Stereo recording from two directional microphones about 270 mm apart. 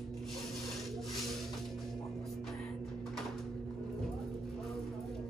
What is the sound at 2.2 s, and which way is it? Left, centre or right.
Music, centre.